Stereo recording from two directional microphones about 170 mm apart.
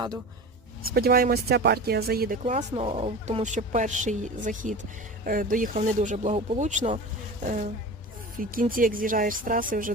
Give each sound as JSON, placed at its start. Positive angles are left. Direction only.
{"t": 0.9, "sound": "speech", "side_deg": -60}
{"t": 2.4, "sound": "speech", "side_deg": -40}